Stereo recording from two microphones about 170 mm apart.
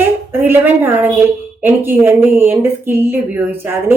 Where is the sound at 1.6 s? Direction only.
10° right (ahead or behind).